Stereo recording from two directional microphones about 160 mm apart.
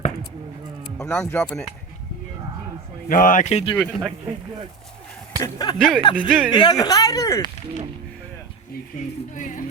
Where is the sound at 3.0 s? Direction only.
55° left (ahead or behind).